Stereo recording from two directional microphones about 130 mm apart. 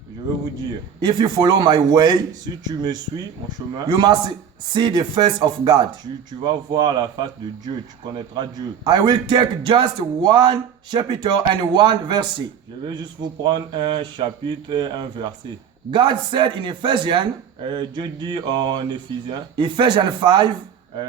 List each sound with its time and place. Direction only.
1.0 s speech: 35° right (ahead or behind)
3.8 s speech: 35° right (ahead or behind)